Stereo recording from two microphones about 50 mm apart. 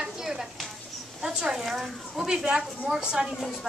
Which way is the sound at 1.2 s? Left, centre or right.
Centre.